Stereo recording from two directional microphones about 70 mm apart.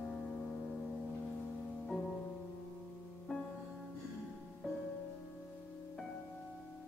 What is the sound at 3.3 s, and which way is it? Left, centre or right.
Music, centre.